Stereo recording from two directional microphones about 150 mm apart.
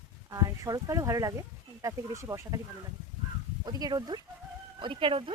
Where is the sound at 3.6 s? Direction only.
25° right (ahead or behind).